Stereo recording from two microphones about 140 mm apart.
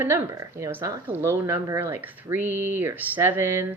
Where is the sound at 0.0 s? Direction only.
20° right (ahead or behind).